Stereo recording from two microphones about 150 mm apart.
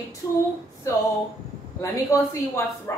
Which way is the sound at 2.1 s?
20° left (ahead or behind).